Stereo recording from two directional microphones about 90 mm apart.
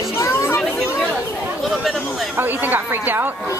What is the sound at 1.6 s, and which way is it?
Speech, centre (ahead or behind).